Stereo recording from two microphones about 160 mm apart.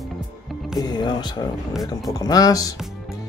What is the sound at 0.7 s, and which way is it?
Speech, 25° left (ahead or behind).